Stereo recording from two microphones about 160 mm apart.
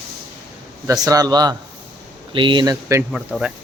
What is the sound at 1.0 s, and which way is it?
A man's voice, 25° right (ahead or behind).